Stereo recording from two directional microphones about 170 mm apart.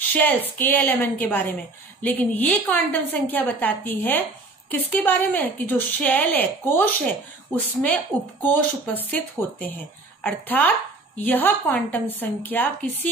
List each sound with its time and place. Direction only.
0.6 s a woman's voice: 10° left (ahead or behind)